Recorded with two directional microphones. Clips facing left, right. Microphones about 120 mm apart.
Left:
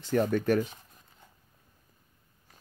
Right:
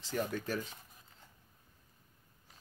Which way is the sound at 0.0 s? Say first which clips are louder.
Left 10 dB; 55° left (ahead or behind).